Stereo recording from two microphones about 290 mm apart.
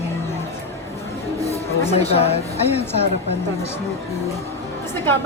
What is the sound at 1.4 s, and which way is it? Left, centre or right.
Speech, left.